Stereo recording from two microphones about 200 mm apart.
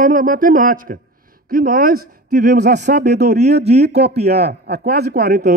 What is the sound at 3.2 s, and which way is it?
Speech, 35° right (ahead or behind).